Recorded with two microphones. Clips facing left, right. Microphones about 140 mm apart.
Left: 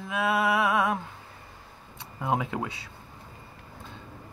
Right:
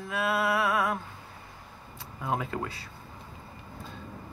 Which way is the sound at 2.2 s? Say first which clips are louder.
Left 3 dB; 15° left (ahead or behind).